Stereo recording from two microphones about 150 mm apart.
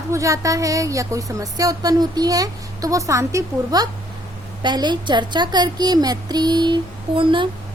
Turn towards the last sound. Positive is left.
turn(degrees=-35)  # may be behind; listen again after turning